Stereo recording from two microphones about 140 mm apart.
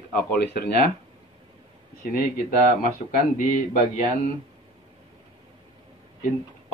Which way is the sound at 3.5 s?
70° left (ahead or behind).